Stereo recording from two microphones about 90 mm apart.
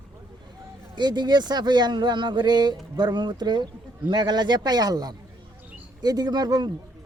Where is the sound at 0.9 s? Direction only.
55° right (ahead or behind).